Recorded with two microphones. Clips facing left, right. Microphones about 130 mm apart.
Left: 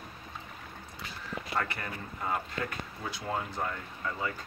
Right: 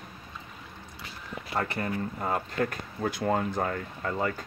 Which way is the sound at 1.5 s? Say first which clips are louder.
Right 6 dB; 30° right (ahead or behind).